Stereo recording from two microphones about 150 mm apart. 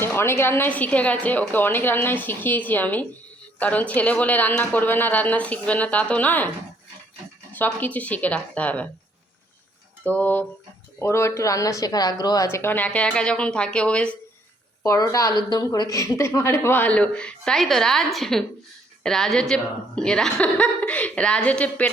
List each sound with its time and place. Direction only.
0.0 s a woman's voice: 15° left (ahead or behind)
7.5 s a woman's voice: 10° left (ahead or behind)
10.0 s a woman's voice: 10° left (ahead or behind)
14.8 s a woman's voice: 25° left (ahead or behind)